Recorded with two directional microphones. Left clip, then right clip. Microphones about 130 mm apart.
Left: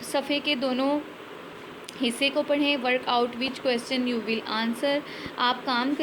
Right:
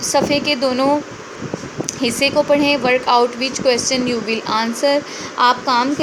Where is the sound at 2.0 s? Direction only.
25° right (ahead or behind).